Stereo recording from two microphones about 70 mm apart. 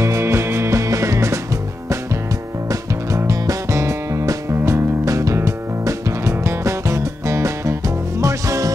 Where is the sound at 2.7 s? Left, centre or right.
Right.